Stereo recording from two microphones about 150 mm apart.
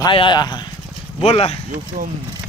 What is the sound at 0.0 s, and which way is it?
Speech, 30° left (ahead or behind).